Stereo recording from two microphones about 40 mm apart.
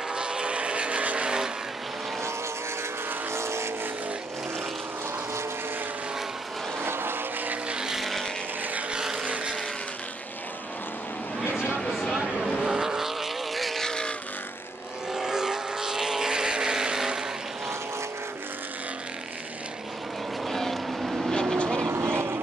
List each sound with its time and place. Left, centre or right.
0.1 s vehicle: right
3.3 s vehicle: right
6.8 s vehicle: right
7.7 s vehicle: centre
9.2 s vehicle: right
12.4 s vehicle: centre
12.6 s vehicle: centre
13.7 s vehicle: centre
15.1 s vehicle: centre
20.4 s vehicle: centre
21.0 s vehicle: centre
21.3 s vehicle: centre
21.9 s vehicle: right